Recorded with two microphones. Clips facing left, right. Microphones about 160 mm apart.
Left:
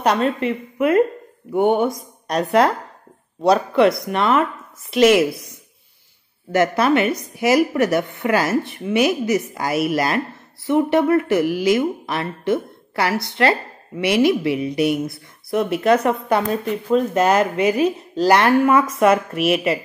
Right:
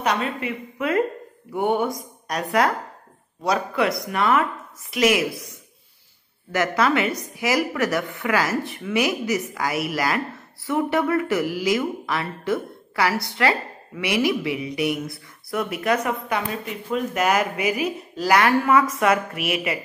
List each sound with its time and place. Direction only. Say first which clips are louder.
0.7 s a woman's voice: left 6 dB; 25° left (ahead or behind)
6.5 s speech: left 4 dB; 25° left (ahead or behind)